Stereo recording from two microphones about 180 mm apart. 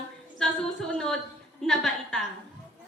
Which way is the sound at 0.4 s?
5° left (ahead or behind).